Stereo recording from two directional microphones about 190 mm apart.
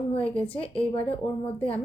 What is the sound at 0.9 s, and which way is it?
Speech, 30° left (ahead or behind).